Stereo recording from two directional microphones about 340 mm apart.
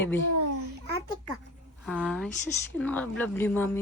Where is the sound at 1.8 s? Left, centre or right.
Centre.